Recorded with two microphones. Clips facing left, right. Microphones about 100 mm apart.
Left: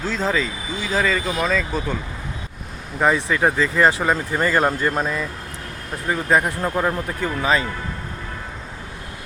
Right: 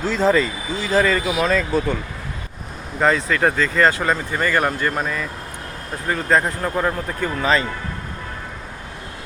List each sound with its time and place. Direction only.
0.0 s speech: centre (ahead or behind)
3.0 s speech: 15° left (ahead or behind)
6.1 s speech: 10° left (ahead or behind)